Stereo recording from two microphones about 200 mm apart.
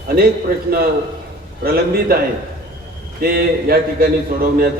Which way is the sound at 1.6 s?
50° right (ahead or behind).